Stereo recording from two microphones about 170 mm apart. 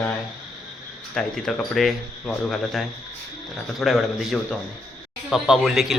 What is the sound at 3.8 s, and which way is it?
A man's voice, centre (ahead or behind).